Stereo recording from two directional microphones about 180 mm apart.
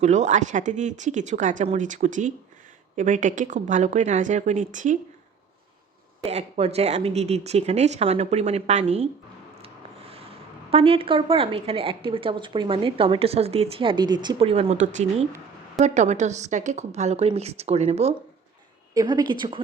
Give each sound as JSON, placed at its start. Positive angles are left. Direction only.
{"t": 0.0, "sound": "speech", "side_deg": -40}
{"t": 6.2, "sound": "a woman's voice", "side_deg": -35}
{"t": 10.7, "sound": "a woman's voice", "side_deg": -30}
{"t": 18.9, "sound": "speech", "side_deg": -25}